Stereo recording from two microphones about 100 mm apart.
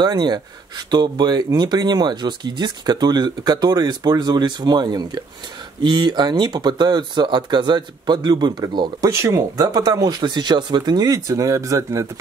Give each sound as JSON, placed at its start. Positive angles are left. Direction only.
{"t": 0.0, "sound": "speech", "side_deg": -45}
{"t": 9.1, "sound": "speech", "side_deg": -30}